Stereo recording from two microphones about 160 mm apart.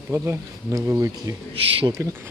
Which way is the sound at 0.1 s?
15° right (ahead or behind).